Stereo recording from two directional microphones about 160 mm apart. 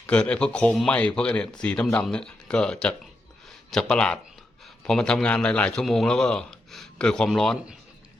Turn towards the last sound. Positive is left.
turn(degrees=0)  # may be behind; listen again after turning